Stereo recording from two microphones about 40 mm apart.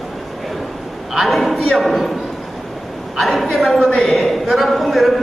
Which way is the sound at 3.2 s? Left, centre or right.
Centre.